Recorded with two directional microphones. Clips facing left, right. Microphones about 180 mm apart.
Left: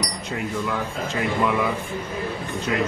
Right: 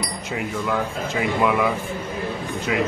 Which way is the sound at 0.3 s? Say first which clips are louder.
Right 2 dB; centre (ahead or behind).